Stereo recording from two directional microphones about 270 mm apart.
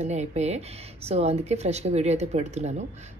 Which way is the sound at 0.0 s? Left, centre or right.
Right.